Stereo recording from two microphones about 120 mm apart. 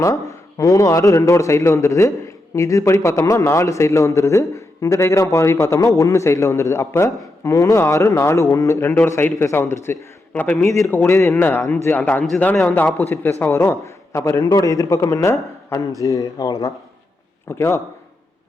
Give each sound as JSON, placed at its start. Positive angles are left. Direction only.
{"t": 0.0, "sound": "a man's voice", "side_deg": 25}